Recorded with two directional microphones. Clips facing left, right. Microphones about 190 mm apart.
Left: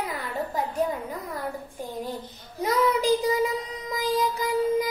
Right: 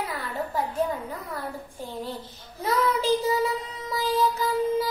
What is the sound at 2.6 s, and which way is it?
Child singing, 15° left (ahead or behind).